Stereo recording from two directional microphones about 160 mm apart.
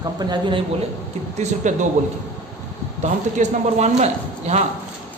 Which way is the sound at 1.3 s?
45° right (ahead or behind).